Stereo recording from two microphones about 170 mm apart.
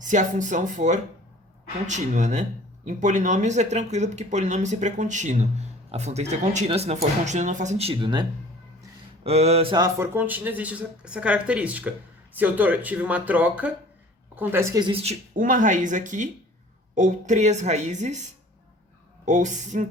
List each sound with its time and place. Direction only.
0.0 s speech: 45° right (ahead or behind); by 8.3 s 25° right (ahead or behind)
9.2 s speech: 40° right (ahead or behind)
9.7 s speech: 20° right (ahead or behind)
10.2 s speech: 10° right (ahead or behind); by 15.1 s 30° right (ahead or behind)
15.4 s speech: 50° right (ahead or behind)
19.2 s speech: 45° right (ahead or behind)